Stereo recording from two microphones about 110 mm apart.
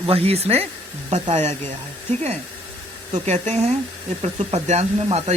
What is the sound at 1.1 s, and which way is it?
Speech, 85° right.